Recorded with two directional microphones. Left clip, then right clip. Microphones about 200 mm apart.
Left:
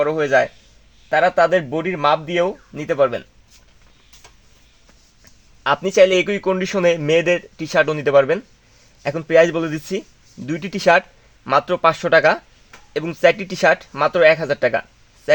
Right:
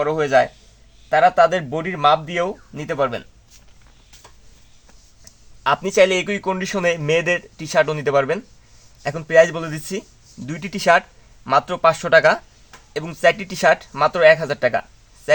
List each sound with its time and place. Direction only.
0.0 s speech: 30° left (ahead or behind)
5.6 s speech: 30° left (ahead or behind)